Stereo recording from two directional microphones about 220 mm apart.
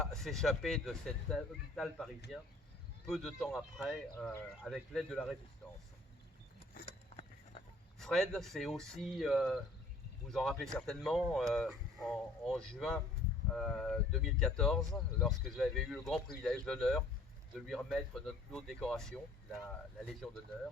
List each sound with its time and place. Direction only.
0.0 s speech: centre (ahead or behind)
6.8 s a sound: 25° left (ahead or behind)
7.9 s speech: centre (ahead or behind)